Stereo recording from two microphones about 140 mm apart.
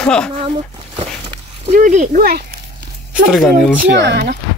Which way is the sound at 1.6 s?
60° right (ahead or behind).